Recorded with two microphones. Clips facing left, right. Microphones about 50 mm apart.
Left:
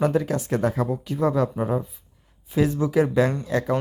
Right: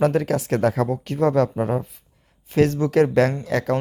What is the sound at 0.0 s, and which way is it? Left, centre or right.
Speech, right.